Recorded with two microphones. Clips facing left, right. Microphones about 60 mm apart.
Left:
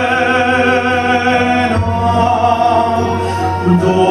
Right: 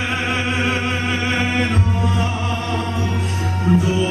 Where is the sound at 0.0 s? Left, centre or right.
Left.